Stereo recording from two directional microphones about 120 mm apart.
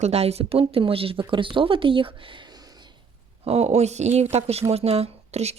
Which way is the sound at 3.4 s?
60° right (ahead or behind).